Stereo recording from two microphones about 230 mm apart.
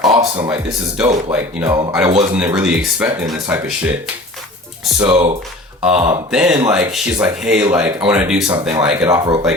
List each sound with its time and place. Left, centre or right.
0.1 s a sound: right
1.3 s speech: centre
1.7 s speech: centre
5.0 s speech: right
5.8 s speech: centre